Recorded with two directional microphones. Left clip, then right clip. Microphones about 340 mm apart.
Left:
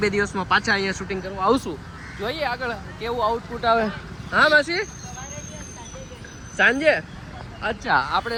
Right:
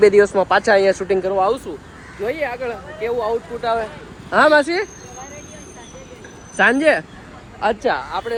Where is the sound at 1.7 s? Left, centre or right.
Left.